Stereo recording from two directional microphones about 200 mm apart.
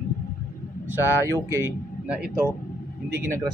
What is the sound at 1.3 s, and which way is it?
A man's voice, 15° right (ahead or behind).